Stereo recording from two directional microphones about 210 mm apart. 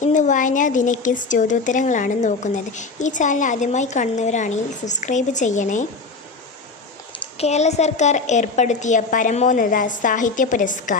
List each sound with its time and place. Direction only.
0.0 s a woman's voice: 35° left (ahead or behind)
7.3 s a woman's voice: 30° left (ahead or behind)